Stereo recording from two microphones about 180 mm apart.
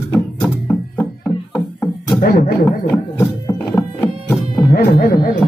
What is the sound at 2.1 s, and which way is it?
Speech, 55° left (ahead or behind).